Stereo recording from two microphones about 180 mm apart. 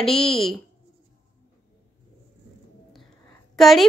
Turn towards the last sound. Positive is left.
turn(degrees=0)  # may be behind; listen again after turning